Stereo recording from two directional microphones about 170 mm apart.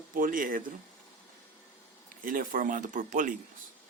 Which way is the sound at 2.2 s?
50° right (ahead or behind).